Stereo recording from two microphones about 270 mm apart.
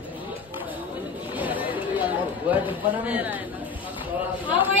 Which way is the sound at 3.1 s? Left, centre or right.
Centre.